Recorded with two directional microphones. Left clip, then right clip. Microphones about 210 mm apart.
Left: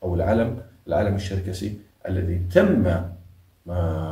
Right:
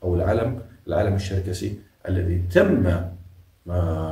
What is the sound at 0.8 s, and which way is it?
Speech, 15° right (ahead or behind).